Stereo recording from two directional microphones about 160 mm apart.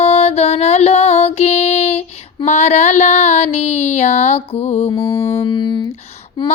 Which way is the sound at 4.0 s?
45° left (ahead or behind).